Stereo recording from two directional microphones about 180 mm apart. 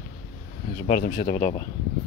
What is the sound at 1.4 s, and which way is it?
Speech, 35° left (ahead or behind).